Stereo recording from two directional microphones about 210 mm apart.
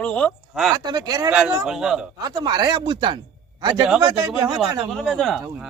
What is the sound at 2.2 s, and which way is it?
Speech, 20° right (ahead or behind).